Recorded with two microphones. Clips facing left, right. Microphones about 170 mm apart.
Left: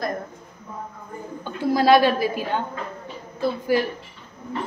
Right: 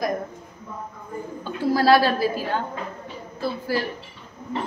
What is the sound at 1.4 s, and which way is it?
A woman's voice, 20° left (ahead or behind).